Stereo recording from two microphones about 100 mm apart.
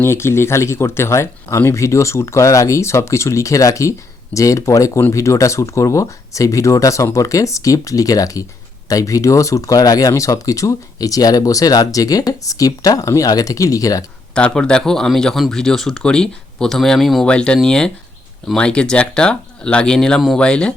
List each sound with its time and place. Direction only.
0.0 s speech: 25° left (ahead or behind)
14.3 s speech: 10° left (ahead or behind)